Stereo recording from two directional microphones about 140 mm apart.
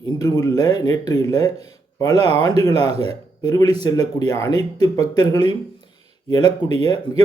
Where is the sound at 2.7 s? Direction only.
45° right (ahead or behind).